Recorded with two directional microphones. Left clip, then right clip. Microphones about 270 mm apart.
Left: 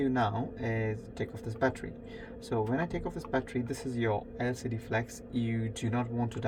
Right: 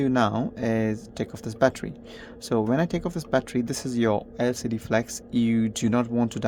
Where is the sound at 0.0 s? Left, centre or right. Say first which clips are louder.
Right 7 dB; right.